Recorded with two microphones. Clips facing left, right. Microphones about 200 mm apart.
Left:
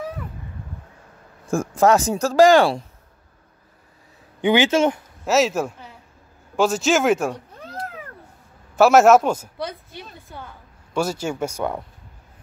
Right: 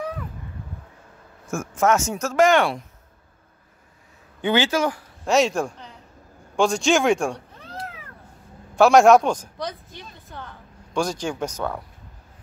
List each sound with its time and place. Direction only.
1.5 s speech: 35° left (ahead or behind)
4.4 s speech: 15° left (ahead or behind)
5.2 s a man's voice: 5° left (ahead or behind)
7.5 s cat: 45° left (ahead or behind)
8.7 s speech: 5° left (ahead or behind)